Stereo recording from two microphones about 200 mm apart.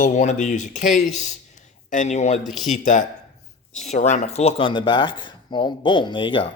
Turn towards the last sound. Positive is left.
turn(degrees=25)  # may be behind; listen again after turning